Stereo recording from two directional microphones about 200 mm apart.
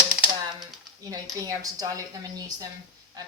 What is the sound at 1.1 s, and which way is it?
Speech, 15° right (ahead or behind).